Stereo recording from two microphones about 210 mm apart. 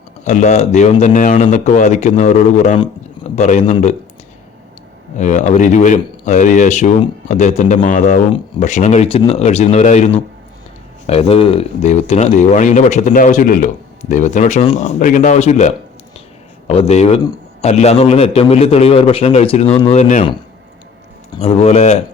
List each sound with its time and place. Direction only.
0.3 s speech: 35° left (ahead or behind)
2.7 s a sound: 20° left (ahead or behind)
3.3 s speech: 35° left (ahead or behind)
5.1 s a man's voice: 35° left (ahead or behind)
21.3 s speech: 30° left (ahead or behind)